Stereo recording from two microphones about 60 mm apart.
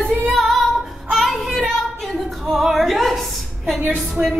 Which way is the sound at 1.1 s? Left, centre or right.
Centre.